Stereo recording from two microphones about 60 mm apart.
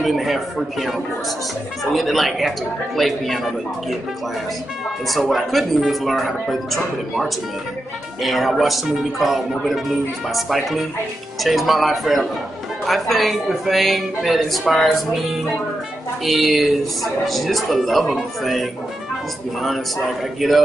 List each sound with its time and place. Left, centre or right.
0.0 s speech: centre
5.3 s speech: centre
20.3 s speech: centre